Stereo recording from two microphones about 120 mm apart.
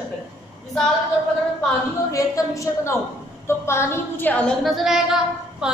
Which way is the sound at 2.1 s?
25° left (ahead or behind).